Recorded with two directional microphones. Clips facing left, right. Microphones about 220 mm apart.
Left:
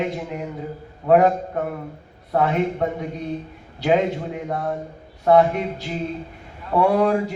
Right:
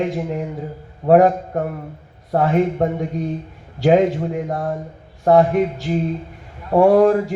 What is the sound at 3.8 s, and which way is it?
Speech, 45° right (ahead or behind).